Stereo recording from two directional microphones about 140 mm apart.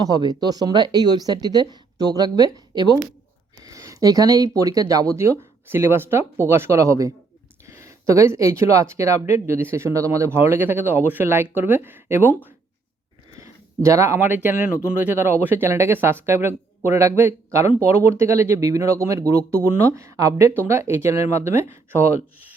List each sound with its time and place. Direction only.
0.0 s speech: 25° right (ahead or behind)